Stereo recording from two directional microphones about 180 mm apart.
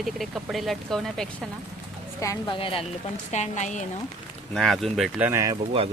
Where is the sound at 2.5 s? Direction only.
30° left (ahead or behind).